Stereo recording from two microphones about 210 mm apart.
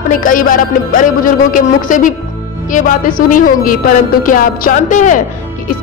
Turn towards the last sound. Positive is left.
turn(degrees=35)  # may be behind; listen again after turning